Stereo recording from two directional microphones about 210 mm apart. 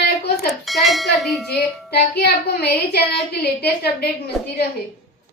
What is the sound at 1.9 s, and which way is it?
Speech, 50° left (ahead or behind).